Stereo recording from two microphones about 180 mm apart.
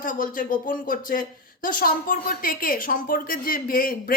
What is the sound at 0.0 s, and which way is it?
Speech, 50° left (ahead or behind).